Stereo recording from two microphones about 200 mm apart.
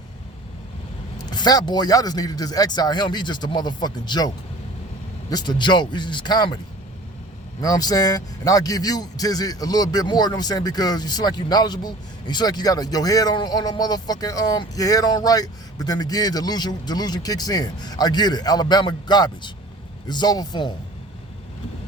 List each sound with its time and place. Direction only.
1.2 s a man's voice: 20° left (ahead or behind)
5.3 s a man's voice: 20° left (ahead or behind)
7.6 s a man's voice: 20° left (ahead or behind)